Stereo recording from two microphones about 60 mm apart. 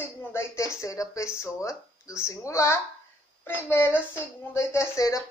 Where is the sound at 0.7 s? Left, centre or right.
Left.